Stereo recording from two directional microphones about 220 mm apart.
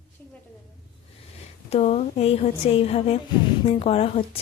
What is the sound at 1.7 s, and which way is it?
A woman's voice, 30° left (ahead or behind).